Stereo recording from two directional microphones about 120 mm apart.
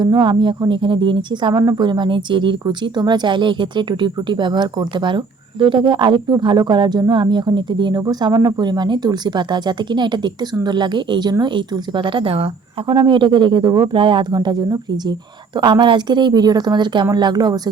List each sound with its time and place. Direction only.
0.0 s speech: 40° right (ahead or behind)